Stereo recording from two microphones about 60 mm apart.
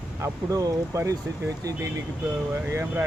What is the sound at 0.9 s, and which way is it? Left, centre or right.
Speech, right.